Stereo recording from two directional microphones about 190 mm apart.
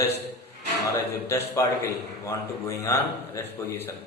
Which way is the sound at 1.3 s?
15° left (ahead or behind).